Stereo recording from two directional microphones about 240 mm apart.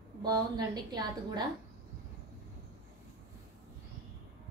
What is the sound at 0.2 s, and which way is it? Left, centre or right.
A woman's voice, centre.